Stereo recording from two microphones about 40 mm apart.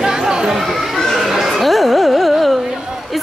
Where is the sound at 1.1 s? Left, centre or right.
Centre.